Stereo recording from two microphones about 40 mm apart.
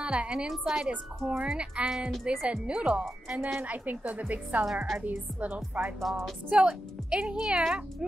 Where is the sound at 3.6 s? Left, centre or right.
Right.